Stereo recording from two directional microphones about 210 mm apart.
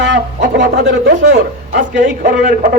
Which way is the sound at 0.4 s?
55° right (ahead or behind).